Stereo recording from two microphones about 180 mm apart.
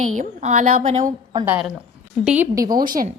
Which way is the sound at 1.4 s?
10° right (ahead or behind).